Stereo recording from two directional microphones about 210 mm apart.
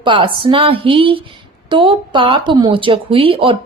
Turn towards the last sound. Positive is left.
turn(degrees=-25)  # may be behind; listen again after turning